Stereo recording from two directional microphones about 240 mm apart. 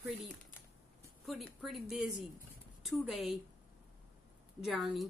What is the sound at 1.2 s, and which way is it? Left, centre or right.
Speech, centre.